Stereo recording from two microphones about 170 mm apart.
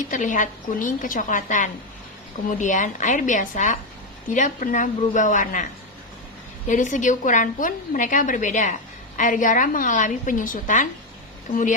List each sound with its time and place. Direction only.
0.1 s a woman's voice: 50° left (ahead or behind)
6.7 s a woman's voice: 50° left (ahead or behind)